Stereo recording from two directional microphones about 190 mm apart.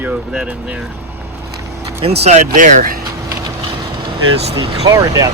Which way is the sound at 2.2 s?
35° right (ahead or behind).